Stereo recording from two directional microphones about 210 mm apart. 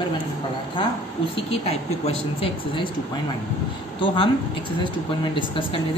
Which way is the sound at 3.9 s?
25° left (ahead or behind).